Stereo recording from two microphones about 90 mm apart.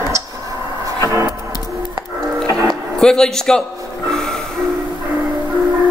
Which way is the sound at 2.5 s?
40° right (ahead or behind).